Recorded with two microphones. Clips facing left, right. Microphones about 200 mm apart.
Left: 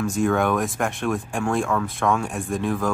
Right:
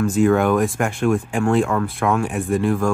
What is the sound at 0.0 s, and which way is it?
Speech, centre (ahead or behind).